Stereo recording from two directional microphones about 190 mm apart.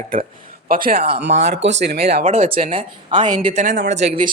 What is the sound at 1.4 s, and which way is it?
Speech, 65° right (ahead or behind).